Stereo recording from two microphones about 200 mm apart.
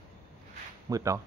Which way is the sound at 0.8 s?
15° right (ahead or behind).